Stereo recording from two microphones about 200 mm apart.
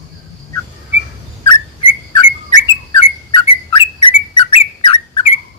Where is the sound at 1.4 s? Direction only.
20° left (ahead or behind).